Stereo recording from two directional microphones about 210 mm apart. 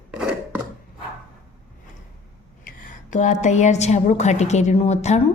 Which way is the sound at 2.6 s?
35° left (ahead or behind).